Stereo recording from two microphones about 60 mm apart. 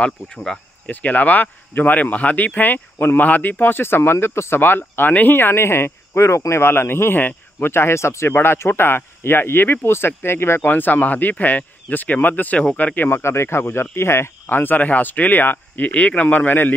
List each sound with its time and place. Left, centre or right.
0.0 s speech: centre
0.8 s speech: left
10.6 s speech: left
13.2 s speech: left
14.5 s speech: left